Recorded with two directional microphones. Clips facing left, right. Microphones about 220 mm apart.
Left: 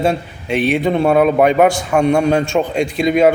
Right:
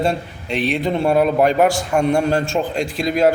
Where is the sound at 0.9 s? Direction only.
55° left (ahead or behind).